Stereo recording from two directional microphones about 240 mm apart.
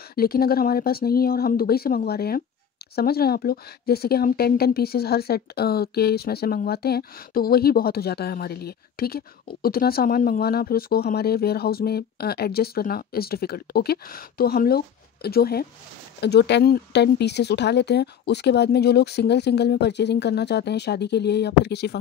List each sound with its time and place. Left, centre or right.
0.1 s speech: left